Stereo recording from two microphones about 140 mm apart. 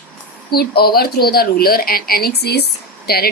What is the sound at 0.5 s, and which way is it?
Speech, 90° left.